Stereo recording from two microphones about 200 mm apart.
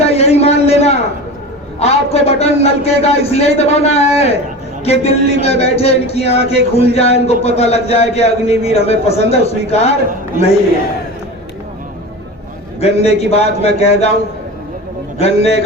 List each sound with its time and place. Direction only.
0.0 s a man's voice: 30° left (ahead or behind)
12.8 s a man's voice: 30° left (ahead or behind)
15.2 s a man's voice: 30° left (ahead or behind)